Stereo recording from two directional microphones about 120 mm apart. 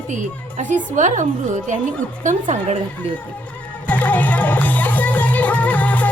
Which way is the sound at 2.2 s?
85° right.